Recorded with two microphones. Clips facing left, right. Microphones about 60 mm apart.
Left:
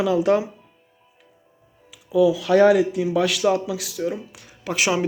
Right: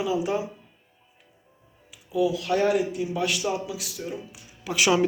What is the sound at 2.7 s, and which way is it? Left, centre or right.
Speech, left.